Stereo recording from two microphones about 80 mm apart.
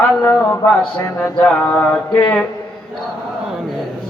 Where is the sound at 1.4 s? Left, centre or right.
Centre.